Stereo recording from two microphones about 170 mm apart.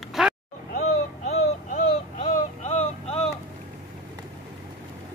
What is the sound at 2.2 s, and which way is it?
Vehicle, 45° left (ahead or behind).